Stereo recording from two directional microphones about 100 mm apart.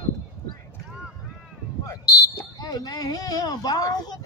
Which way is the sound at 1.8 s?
35° left (ahead or behind).